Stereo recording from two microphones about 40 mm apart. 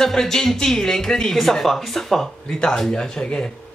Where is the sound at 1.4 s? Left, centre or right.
Centre.